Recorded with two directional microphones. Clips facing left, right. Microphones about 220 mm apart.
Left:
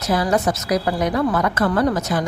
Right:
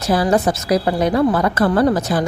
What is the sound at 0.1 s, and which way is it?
A woman's voice, 30° right (ahead or behind).